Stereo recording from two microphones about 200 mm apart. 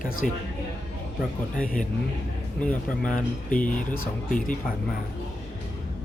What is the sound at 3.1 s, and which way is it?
Speech, 40° left (ahead or behind).